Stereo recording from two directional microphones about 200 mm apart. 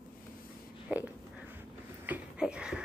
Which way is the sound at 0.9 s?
5° right (ahead or behind).